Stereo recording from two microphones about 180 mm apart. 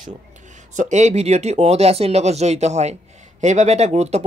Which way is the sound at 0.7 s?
40° right (ahead or behind).